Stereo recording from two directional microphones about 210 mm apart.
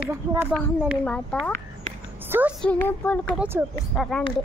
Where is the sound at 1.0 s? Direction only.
5° left (ahead or behind).